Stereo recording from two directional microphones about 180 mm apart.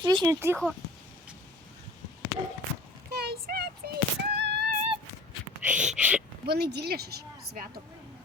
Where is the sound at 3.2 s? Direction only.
60° right (ahead or behind).